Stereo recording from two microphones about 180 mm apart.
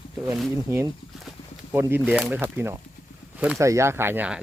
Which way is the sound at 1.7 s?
10° right (ahead or behind).